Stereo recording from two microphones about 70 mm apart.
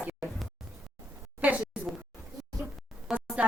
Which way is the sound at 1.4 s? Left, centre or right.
Centre.